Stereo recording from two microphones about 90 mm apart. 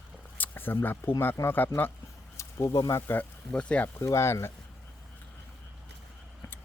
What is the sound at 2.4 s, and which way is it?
Speech, 35° left (ahead or behind).